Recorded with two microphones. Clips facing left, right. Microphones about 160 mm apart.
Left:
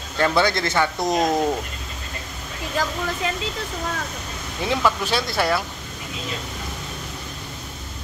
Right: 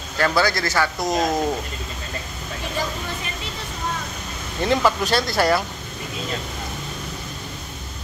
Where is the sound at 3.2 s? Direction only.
90° left.